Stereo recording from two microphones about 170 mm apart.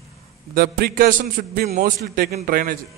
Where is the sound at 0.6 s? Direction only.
60° right (ahead or behind).